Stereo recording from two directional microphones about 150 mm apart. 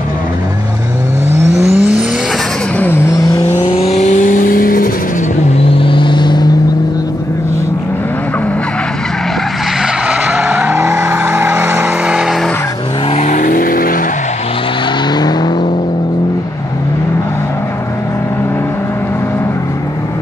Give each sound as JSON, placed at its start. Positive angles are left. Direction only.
{"t": 1.8, "sound": "vehicle", "side_deg": -10}
{"t": 2.8, "sound": "vehicle", "side_deg": 15}
{"t": 3.7, "sound": "vehicle", "side_deg": 45}
{"t": 5.8, "sound": "vehicle", "side_deg": 35}
{"t": 10.0, "sound": "vehicle", "side_deg": -10}
{"t": 13.1, "sound": "vehicle", "side_deg": 55}
{"t": 15.1, "sound": "car", "side_deg": 30}